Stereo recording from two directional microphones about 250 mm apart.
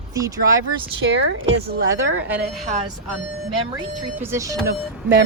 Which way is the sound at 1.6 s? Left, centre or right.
Right.